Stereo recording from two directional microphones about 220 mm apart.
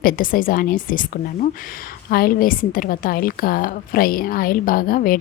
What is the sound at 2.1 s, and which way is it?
A woman's voice, 40° left (ahead or behind).